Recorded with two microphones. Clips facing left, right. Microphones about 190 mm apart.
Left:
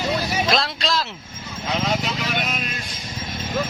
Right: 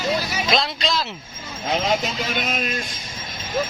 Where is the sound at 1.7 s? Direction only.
45° right (ahead or behind).